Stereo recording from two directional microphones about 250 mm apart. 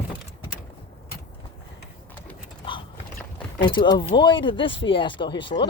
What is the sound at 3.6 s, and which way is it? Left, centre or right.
Speech, centre.